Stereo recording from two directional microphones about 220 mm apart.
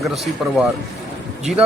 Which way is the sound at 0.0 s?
Centre (ahead or behind).